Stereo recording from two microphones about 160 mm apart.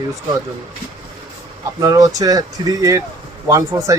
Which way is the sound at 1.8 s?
20° right (ahead or behind).